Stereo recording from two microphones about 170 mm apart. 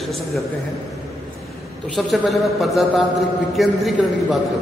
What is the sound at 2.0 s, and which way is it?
Speech, centre (ahead or behind).